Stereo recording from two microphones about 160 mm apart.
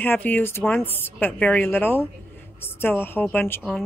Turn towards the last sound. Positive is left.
turn(degrees=10)  # may be behind; listen again after turning